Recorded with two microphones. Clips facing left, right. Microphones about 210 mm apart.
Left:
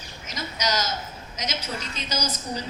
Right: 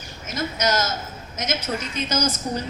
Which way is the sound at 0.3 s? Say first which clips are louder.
Right 5 dB; 50° right (ahead or behind).